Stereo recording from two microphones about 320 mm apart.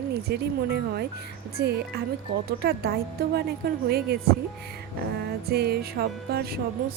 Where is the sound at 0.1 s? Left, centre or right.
Right.